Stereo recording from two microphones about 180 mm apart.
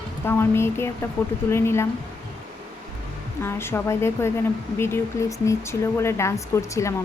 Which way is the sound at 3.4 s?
15° left (ahead or behind).